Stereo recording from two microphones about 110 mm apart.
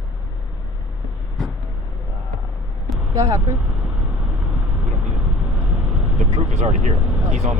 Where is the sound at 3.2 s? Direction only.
30° right (ahead or behind).